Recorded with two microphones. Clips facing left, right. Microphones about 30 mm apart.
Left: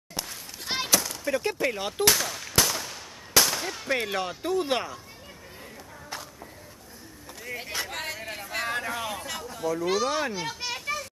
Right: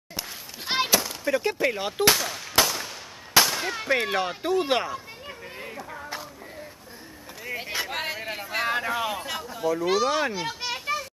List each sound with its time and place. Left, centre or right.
0.7 s gunshot: centre
2.6 s firecracker: centre
3.4 s clang: centre
7.4 s a sound: centre